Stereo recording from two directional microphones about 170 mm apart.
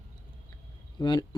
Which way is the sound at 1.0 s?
25° left (ahead or behind).